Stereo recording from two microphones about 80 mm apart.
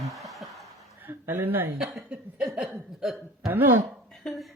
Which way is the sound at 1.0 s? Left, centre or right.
Right.